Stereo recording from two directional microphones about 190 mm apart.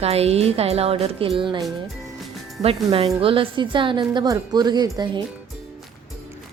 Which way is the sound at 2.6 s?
30° right (ahead or behind).